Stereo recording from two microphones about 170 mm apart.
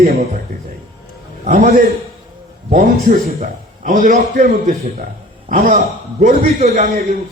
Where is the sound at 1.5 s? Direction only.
55° right (ahead or behind).